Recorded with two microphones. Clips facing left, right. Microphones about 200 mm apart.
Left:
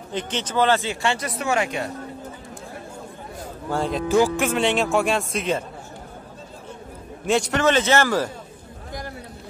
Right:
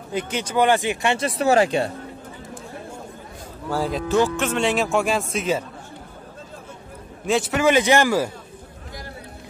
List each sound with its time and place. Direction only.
0.1 s speech: 10° right (ahead or behind)
1.4 s speech: 35° right (ahead or behind)
3.7 s speech: centre (ahead or behind)
4.1 s speech: 10° left (ahead or behind)
7.2 s speech: centre (ahead or behind)